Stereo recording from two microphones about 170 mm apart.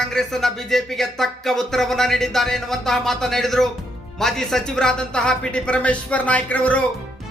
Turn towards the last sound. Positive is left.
turn(degrees=10)  # may be behind; listen again after turning